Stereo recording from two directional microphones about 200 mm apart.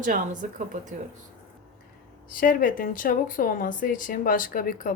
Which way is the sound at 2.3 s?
45° left (ahead or behind).